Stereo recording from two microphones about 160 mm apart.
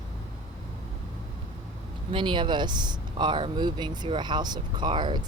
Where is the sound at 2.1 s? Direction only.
30° right (ahead or behind).